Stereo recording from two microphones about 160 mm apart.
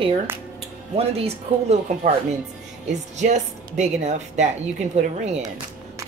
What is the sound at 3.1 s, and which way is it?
Speech, 45° right (ahead or behind).